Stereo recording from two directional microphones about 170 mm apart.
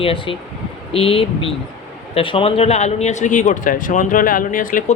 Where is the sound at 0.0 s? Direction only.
35° left (ahead or behind).